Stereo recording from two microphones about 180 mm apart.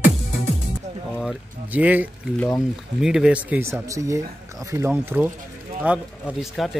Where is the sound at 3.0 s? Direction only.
5° right (ahead or behind).